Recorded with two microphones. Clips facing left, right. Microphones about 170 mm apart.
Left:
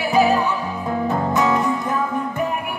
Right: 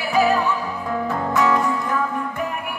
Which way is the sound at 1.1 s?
20° left (ahead or behind).